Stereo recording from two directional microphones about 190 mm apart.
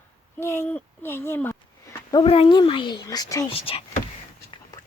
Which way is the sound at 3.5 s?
30° left (ahead or behind).